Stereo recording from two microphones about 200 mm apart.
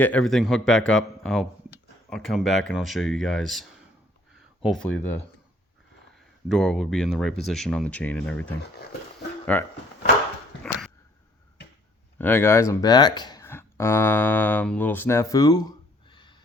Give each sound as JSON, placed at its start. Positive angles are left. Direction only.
{"t": 0.0, "sound": "speech", "side_deg": 5}
{"t": 6.1, "sound": "speech", "side_deg": 0}
{"t": 10.6, "sound": "a sound", "side_deg": 5}
{"t": 12.2, "sound": "speech", "side_deg": 10}